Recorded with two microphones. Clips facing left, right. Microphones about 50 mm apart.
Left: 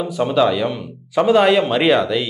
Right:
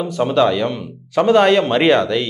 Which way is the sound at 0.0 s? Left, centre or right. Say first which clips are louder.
Right 1 dB; centre.